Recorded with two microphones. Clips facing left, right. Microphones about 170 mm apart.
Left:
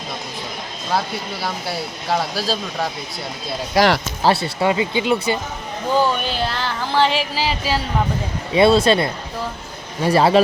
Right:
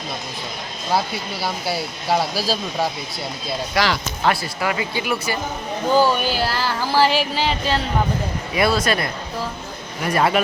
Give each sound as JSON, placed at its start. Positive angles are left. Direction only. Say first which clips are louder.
{"t": 0.9, "sound": "speech", "louder": "right 1 dB", "side_deg": -5}
{"t": 3.8, "sound": "speech", "louder": "left 6 dB", "side_deg": 35}
{"t": 4.6, "sound": "speech", "louder": "left 5 dB", "side_deg": 25}
{"t": 5.9, "sound": "speech", "louder": "right 1 dB", "side_deg": -5}
{"t": 8.5, "sound": "speech", "louder": "left 6 dB", "side_deg": 25}